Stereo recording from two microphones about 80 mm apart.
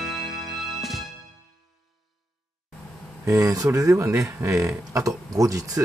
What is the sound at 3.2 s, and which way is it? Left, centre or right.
Speech, right.